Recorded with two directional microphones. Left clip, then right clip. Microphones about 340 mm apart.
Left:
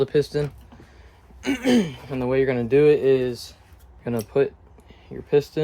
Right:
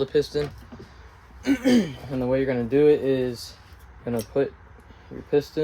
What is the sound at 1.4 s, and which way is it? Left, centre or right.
Speech, left.